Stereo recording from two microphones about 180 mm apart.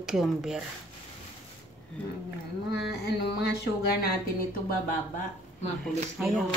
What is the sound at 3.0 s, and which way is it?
Speech, 65° left (ahead or behind).